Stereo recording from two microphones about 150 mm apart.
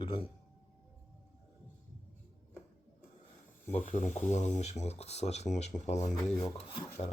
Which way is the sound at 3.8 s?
50° left (ahead or behind).